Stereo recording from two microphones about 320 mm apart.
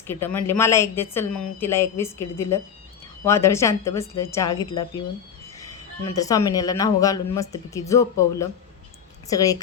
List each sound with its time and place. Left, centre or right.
0.1 s speech: centre
6.1 s speech: centre